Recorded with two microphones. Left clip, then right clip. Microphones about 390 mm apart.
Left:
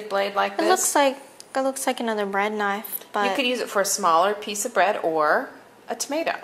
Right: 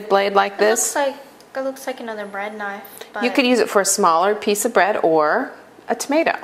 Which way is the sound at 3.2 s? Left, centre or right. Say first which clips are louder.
Right 9 dB; right.